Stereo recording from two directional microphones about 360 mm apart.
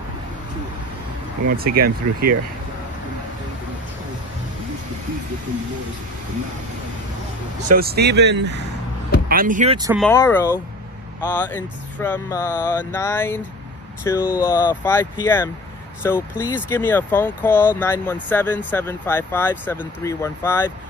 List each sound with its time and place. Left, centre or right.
1.6 s speech: right
7.6 s speech: right
9.9 s speech: centre